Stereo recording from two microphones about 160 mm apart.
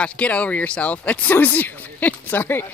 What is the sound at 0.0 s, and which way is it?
Speech, 10° left (ahead or behind).